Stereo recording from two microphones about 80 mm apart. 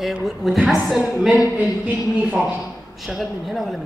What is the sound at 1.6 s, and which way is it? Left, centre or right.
Speech, centre.